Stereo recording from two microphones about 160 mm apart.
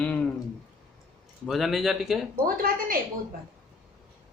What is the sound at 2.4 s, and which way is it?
Speech, 65° right (ahead or behind).